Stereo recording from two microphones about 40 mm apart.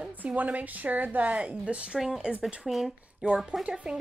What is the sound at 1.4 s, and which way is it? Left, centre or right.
Speech, right.